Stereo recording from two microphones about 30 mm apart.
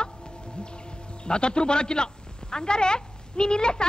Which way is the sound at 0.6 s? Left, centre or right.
Left.